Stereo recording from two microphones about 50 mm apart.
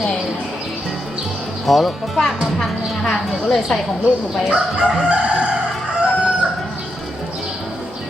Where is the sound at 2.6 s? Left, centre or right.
Centre.